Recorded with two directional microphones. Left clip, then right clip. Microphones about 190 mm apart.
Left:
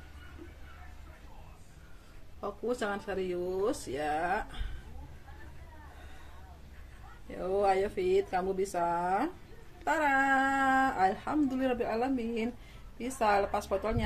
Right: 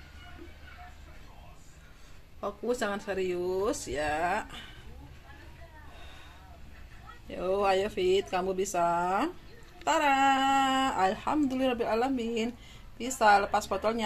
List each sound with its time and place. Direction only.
2.4 s speech: 15° right (ahead or behind)
7.2 s speech: 25° right (ahead or behind)